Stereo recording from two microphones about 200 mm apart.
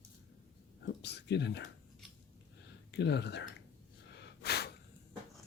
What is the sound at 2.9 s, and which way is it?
Speech, 60° left (ahead or behind).